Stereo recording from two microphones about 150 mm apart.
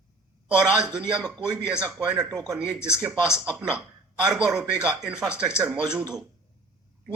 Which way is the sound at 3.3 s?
5° right (ahead or behind).